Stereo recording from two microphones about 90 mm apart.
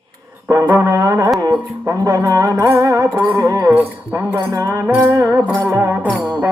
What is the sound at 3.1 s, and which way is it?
Music, 20° right (ahead or behind).